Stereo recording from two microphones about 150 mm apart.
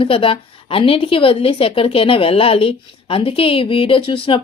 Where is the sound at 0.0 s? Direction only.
35° left (ahead or behind).